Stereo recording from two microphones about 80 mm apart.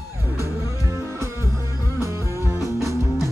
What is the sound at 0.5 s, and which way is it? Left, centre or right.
Music, right.